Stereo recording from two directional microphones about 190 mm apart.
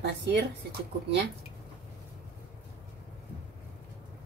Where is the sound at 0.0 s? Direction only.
60° right (ahead or behind).